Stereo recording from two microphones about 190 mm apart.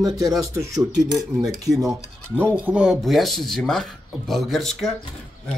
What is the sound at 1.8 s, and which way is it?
Speech, 15° right (ahead or behind).